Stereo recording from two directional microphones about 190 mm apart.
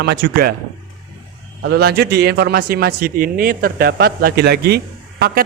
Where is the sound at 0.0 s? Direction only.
55° right (ahead or behind).